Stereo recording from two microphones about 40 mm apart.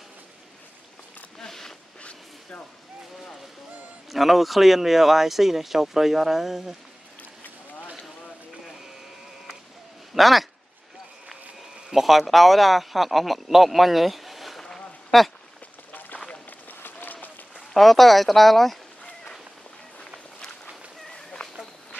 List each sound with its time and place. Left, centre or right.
1.4 s a sound: centre
4.1 s speech: centre
10.1 s speech: centre
11.9 s speech: centre
14.7 s a sound: centre
15.9 s run: left
16.4 s applause: left
17.6 s speech: centre
21.1 s a sound: left